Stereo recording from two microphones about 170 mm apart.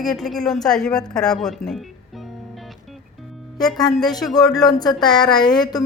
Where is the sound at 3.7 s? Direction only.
25° left (ahead or behind).